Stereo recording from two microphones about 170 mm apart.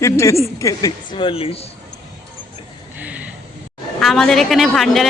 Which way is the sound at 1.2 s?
30° left (ahead or behind).